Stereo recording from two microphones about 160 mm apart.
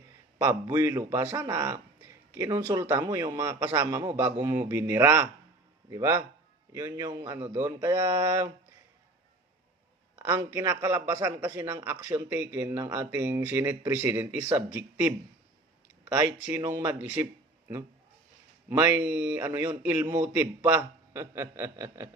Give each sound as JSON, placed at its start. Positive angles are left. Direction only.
{"t": 0.3, "sound": "a man's voice", "side_deg": -20}
{"t": 7.3, "sound": "a man's voice", "side_deg": -15}
{"t": 10.2, "sound": "a man's voice", "side_deg": -15}
{"t": 16.1, "sound": "a man's voice", "side_deg": -20}
{"t": 18.7, "sound": "a man's voice", "side_deg": -15}